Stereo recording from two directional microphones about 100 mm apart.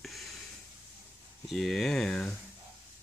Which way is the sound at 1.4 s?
5° left (ahead or behind).